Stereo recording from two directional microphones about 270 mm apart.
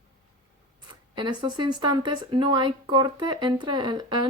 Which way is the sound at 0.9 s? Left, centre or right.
Centre.